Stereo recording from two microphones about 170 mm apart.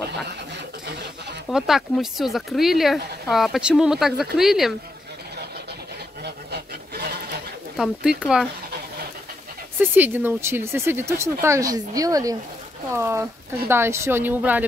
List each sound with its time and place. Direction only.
1.5 s speech: centre (ahead or behind)
6.2 s a sound: 70° right (ahead or behind)
7.7 s speech: 5° right (ahead or behind)
9.8 s speech: 10° right (ahead or behind)